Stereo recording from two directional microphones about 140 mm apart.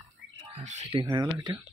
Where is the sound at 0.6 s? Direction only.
55° right (ahead or behind).